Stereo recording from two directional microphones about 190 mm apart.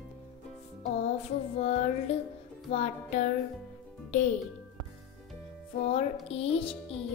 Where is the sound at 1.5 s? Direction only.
35° left (ahead or behind).